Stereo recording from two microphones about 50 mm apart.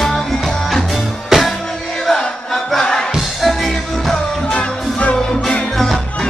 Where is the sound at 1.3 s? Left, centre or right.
Centre.